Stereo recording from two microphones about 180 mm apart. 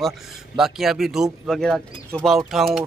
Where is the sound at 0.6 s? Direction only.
Centre (ahead or behind).